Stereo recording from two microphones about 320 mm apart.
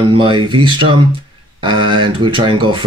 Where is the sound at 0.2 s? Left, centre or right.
Centre.